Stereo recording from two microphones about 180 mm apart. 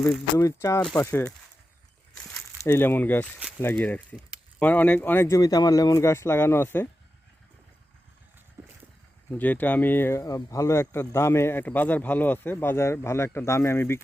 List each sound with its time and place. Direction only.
0.3 s speech: 15° left (ahead or behind)
2.6 s speech: 10° left (ahead or behind)
9.3 s speech: 10° left (ahead or behind)